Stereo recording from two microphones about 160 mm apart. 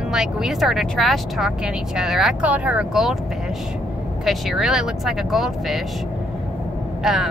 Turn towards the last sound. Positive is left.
turn(degrees=0)  # may be behind; listen again after turning